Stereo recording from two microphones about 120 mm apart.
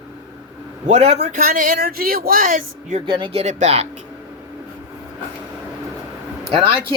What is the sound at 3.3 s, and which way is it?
Speech, 65° right (ahead or behind).